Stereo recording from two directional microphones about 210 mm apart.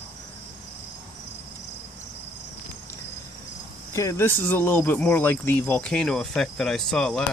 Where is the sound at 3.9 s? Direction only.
15° left (ahead or behind).